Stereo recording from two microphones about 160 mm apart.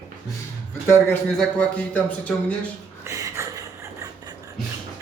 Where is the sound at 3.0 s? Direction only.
20° right (ahead or behind).